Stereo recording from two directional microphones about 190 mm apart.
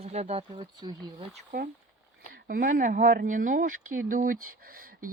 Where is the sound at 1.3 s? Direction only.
50° right (ahead or behind).